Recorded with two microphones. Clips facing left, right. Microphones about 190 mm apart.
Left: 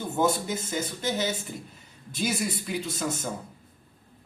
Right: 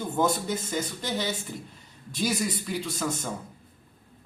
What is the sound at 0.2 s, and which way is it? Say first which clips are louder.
Speech: left 1 dB; 5° left (ahead or behind).